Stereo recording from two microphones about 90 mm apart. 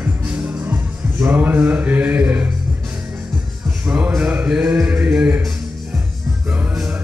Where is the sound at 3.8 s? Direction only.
15° right (ahead or behind).